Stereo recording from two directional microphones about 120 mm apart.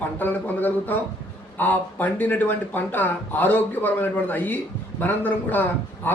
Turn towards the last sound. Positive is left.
turn(degrees=15)  # may be behind; listen again after turning